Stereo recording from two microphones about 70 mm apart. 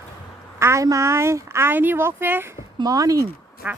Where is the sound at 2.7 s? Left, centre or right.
Right.